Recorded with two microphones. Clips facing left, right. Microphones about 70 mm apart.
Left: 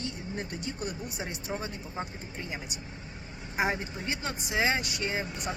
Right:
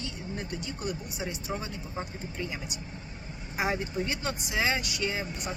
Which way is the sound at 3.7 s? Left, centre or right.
Left.